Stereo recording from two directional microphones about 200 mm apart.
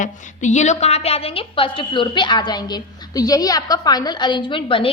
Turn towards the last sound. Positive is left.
turn(degrees=25)  # may be behind; listen again after turning